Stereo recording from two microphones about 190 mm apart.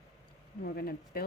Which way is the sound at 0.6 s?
55° left (ahead or behind).